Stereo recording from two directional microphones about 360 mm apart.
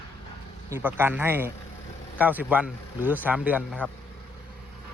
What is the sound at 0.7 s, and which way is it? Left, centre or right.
Speech, centre.